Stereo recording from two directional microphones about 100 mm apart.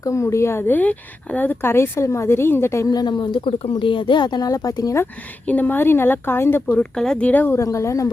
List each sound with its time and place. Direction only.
0.0 s speech: 30° left (ahead or behind)
2.9 s speech: 45° left (ahead or behind)
5.5 s speech: 15° left (ahead or behind)
6.7 s speech: 5° left (ahead or behind)
7.5 s speech: 30° left (ahead or behind)